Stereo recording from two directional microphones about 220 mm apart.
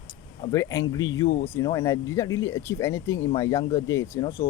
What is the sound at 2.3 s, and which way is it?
Speech, 65° left (ahead or behind).